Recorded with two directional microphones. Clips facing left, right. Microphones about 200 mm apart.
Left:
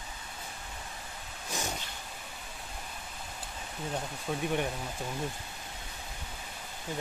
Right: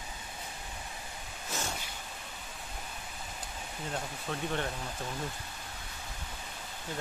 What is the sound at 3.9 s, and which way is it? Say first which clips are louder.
Speech: left 3 dB; 10° left (ahead or behind).